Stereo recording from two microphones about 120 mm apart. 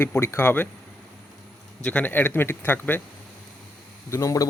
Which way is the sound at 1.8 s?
15° left (ahead or behind).